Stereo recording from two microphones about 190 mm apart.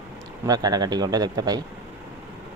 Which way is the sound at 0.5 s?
20° right (ahead or behind).